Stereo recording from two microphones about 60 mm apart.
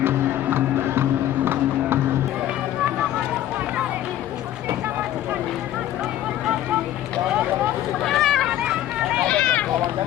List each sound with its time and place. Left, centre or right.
0.0 s music: right
8.0 s a sound: centre
8.4 s run: centre
9.2 s run: centre